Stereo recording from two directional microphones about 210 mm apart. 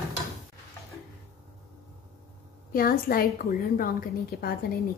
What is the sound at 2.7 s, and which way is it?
A woman's voice, 45° left (ahead or behind).